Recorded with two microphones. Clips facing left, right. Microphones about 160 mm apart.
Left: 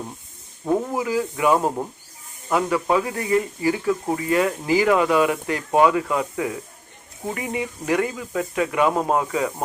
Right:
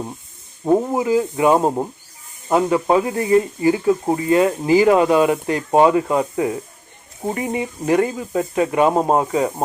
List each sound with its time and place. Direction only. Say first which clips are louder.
0.6 s speech: right 5 dB; 25° right (ahead or behind)